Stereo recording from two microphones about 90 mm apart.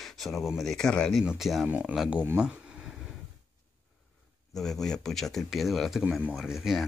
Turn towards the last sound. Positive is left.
turn(degrees=-5)  # may be behind; listen again after turning